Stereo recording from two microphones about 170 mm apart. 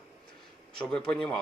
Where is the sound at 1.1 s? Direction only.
5° left (ahead or behind).